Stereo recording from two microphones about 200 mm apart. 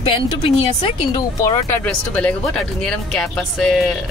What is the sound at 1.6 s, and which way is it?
Speech, 5° left (ahead or behind).